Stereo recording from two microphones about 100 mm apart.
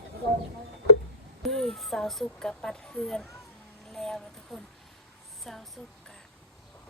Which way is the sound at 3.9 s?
5° left (ahead or behind).